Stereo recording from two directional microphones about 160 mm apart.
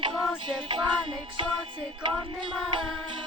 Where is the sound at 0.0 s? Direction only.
30° right (ahead or behind).